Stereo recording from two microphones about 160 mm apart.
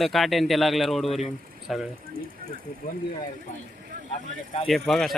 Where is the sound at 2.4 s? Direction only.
65° right (ahead or behind).